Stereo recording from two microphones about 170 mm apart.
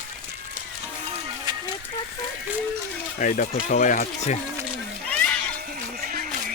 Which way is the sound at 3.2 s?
50° left (ahead or behind).